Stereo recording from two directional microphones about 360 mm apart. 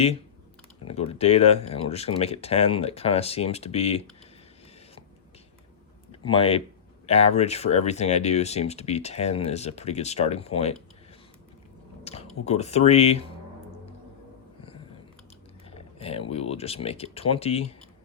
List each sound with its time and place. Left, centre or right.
0.9 s speech: centre
6.1 s speech: centre
12.0 s speech: centre
15.7 s speech: centre